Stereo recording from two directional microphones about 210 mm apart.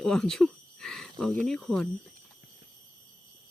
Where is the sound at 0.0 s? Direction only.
Centre (ahead or behind).